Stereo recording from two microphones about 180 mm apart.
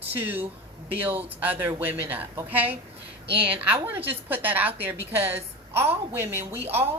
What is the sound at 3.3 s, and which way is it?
Speech, 30° right (ahead or behind).